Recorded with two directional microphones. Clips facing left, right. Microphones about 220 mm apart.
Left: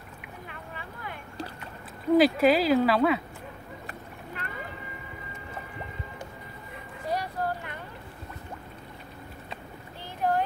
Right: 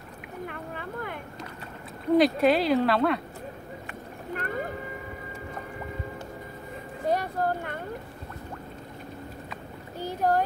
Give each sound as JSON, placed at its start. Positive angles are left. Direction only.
{"t": 0.5, "sound": "boat", "side_deg": -50}
{"t": 2.1, "sound": "speech", "side_deg": 0}
{"t": 4.4, "sound": "boat", "side_deg": -45}
{"t": 7.1, "sound": "a sound", "side_deg": -45}
{"t": 9.9, "sound": "boat", "side_deg": -40}